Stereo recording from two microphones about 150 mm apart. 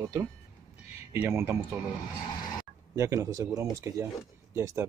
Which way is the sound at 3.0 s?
20° right (ahead or behind).